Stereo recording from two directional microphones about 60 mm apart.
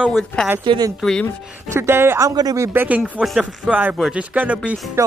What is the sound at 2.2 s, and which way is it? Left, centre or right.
Speech, right.